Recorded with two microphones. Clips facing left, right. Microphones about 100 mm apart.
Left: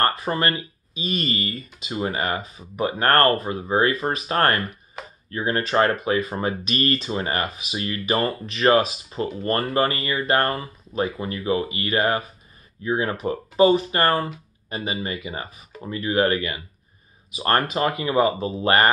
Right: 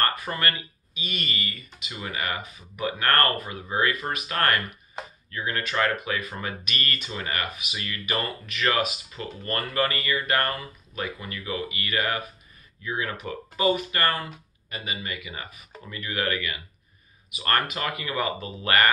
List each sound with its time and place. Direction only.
0.0 s speech: 30° left (ahead or behind)